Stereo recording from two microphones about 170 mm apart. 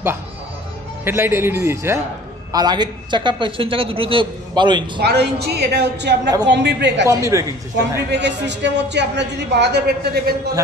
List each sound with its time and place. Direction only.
1.0 s a man's voice: 15° right (ahead or behind)
5.0 s a woman's voice: 70° right (ahead or behind)
6.4 s a man's voice: 90° right
7.1 s a man's voice: 20° right (ahead or behind)
8.1 s a man's voice: 90° right; by 10.3 s 65° right (ahead or behind)